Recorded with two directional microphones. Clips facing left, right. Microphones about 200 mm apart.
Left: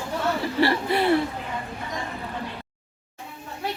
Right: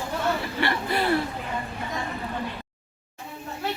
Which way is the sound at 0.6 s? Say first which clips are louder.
Left 4 dB; 30° left (ahead or behind).